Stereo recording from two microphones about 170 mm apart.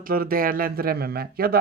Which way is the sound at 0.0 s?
60° right (ahead or behind).